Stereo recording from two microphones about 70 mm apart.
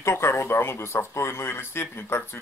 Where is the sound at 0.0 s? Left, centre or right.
Left.